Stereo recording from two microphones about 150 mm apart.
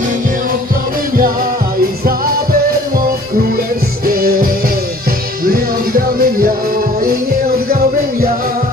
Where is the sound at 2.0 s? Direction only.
80° right.